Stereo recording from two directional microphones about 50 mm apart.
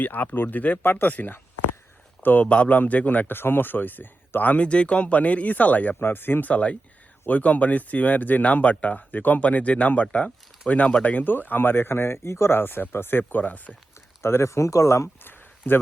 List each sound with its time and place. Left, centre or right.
0.0 s a man's voice: left
4.5 s speech: left
6.1 s speech: left
6.5 s a man's voice: left
13.4 s speech: left
14.2 s speech: left
15.2 s a sound: left